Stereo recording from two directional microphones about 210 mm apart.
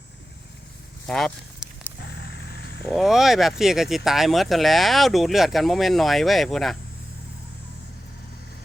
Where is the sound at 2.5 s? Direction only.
55° left (ahead or behind).